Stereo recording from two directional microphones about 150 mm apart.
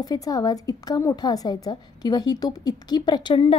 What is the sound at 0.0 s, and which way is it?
A woman's voice, 25° left (ahead or behind).